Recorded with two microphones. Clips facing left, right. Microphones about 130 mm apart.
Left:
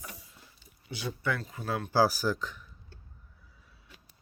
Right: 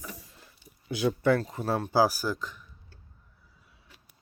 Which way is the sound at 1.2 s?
40° right (ahead or behind).